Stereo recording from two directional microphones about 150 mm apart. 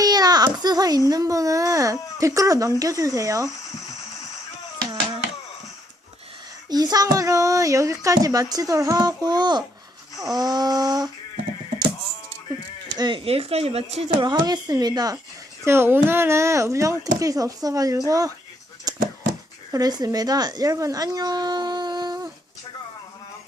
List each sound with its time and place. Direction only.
0.0 s a child's voice: 25° right (ahead or behind)
6.7 s a child's voice: 25° right (ahead or behind)
13.0 s speech: 35° right (ahead or behind)
14.3 s a child's voice: 30° right (ahead or behind)
18.9 s a sound: 25° right (ahead or behind)
19.7 s a woman's voice: 25° right (ahead or behind)